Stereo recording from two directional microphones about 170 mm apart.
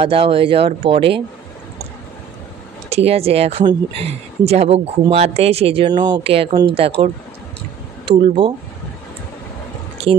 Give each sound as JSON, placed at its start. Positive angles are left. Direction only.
{"t": 0.0, "sound": "speech", "side_deg": -30}
{"t": 2.9, "sound": "speech", "side_deg": -35}